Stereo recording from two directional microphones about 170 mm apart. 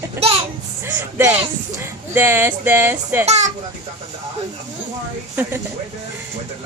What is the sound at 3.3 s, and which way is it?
Speech, 40° right (ahead or behind).